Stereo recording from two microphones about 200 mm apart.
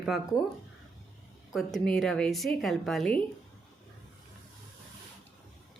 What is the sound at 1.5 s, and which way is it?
A woman's voice, centre (ahead or behind).